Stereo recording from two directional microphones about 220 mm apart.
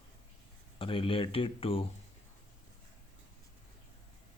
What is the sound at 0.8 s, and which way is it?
Speech, 25° left (ahead or behind).